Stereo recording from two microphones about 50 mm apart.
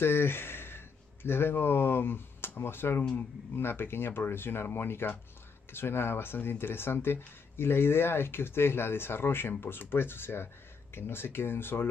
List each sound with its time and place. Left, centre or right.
0.0 s speech: left